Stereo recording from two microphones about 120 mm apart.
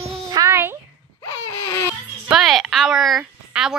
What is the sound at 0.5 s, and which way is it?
Speech, 20° right (ahead or behind).